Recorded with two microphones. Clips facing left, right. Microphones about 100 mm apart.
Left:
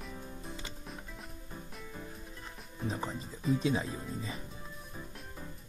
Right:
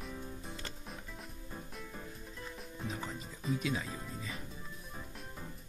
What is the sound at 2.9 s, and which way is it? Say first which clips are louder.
Speech: left 6 dB; 35° left (ahead or behind).